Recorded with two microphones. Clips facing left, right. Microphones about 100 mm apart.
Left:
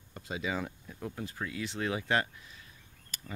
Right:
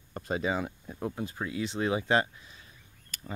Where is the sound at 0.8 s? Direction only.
30° right (ahead or behind).